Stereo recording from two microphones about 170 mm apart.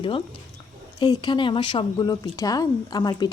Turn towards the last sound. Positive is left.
turn(degrees=25)  # may be behind; listen again after turning